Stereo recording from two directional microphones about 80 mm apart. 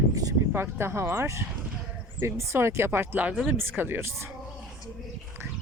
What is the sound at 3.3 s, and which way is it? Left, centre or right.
Speech, centre.